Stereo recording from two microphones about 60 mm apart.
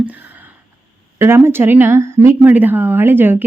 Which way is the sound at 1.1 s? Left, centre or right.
Right.